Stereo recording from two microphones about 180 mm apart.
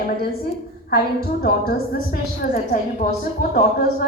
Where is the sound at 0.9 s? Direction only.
55° left (ahead or behind).